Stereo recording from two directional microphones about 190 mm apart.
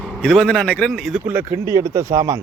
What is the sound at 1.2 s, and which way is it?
Speech, 15° right (ahead or behind).